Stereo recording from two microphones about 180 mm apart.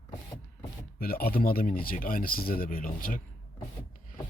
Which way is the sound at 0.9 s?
55° left (ahead or behind).